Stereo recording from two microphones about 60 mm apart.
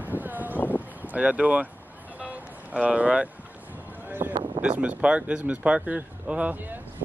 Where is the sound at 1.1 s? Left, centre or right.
Right.